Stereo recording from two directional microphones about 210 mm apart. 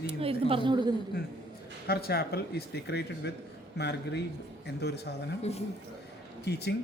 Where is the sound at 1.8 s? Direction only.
45° left (ahead or behind).